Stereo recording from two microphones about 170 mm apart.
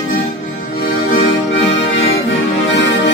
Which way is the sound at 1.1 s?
90° left.